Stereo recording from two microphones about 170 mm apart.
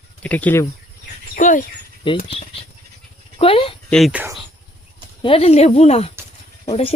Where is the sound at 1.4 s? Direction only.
50° left (ahead or behind).